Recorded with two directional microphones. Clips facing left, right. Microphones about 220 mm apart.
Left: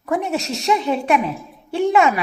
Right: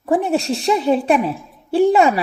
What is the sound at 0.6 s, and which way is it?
Speech, 35° right (ahead or behind).